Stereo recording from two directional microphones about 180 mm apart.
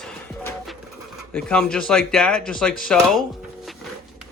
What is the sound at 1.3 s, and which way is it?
Speech, 5° left (ahead or behind).